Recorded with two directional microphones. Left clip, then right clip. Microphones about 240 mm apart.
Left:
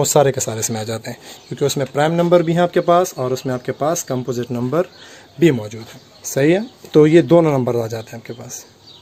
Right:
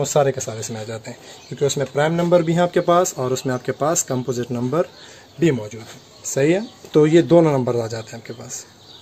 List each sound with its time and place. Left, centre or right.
0.0 s speech: left; by 4.8 s centre
5.4 s speech: left; by 8.6 s centre